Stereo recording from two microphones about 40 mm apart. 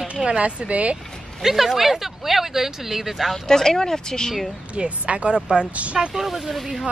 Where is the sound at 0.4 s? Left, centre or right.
Right.